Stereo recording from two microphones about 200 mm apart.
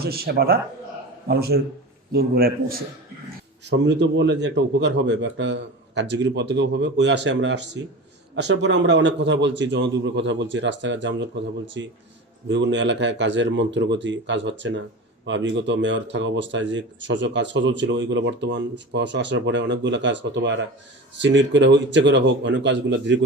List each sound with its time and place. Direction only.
0.0 s a man's voice: 50° right (ahead or behind)
3.7 s speech: 60° right (ahead or behind)